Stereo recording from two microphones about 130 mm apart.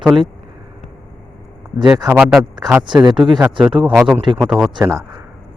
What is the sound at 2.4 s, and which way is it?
Speech, 30° right (ahead or behind).